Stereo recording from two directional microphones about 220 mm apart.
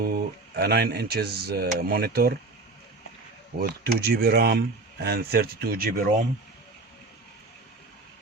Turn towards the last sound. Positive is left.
turn(degrees=-40)  # may be behind; listen again after turning